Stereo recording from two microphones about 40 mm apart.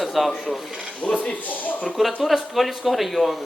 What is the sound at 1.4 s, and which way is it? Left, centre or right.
Speech, left.